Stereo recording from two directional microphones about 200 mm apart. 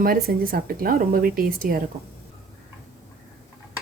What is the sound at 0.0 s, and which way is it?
Speech, 50° right (ahead or behind).